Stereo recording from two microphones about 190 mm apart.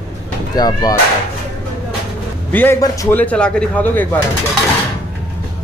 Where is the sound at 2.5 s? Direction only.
10° left (ahead or behind).